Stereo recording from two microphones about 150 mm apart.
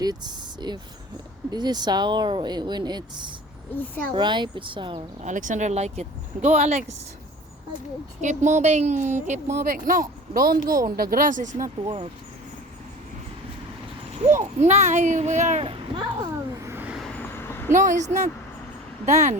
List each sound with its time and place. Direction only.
0.0 s a sound: 25° right (ahead or behind)
1.5 s speech: 30° right (ahead or behind)
3.8 s a child's voice: 10° left (ahead or behind)
4.1 s speech: 30° right (ahead or behind)
5.2 s speech: 60° right (ahead or behind)
8.2 s speech: 55° right (ahead or behind)
9.6 s speech: 65° right (ahead or behind)
14.3 s speech: 50° right (ahead or behind)
15.6 s a child's voice: 35° right (ahead or behind)
16.6 s vehicle: 15° right (ahead or behind)
17.2 s vehicle: 15° left (ahead or behind)
17.7 s speech: 55° right (ahead or behind)